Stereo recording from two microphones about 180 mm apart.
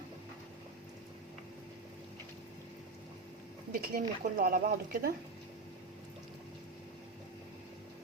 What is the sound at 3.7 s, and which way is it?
Speech, 55° right (ahead or behind).